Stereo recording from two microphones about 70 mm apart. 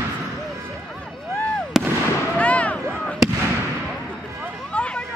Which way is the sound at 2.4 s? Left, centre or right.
Centre.